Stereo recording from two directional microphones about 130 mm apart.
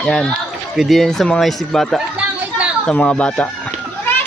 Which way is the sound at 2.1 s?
10° right (ahead or behind).